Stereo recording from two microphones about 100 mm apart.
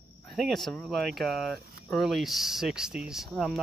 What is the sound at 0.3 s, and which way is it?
Speech, centre (ahead or behind).